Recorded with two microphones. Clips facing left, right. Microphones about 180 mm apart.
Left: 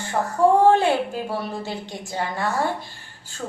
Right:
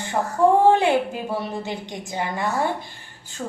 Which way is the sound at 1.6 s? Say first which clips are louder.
Right 1 dB; 15° right (ahead or behind).